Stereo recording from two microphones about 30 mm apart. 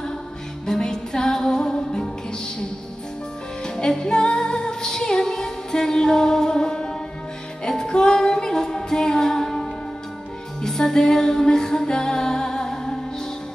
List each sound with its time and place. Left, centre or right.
0.7 s music: left
3.6 s music: left
10.6 s music: centre